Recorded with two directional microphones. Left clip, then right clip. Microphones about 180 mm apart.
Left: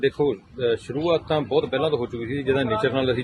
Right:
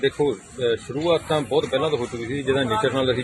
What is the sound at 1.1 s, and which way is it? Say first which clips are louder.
Speech: right 1 dB; 30° left (ahead or behind).